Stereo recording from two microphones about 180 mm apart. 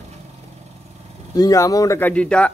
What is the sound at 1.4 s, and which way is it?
Speech, 20° left (ahead or behind).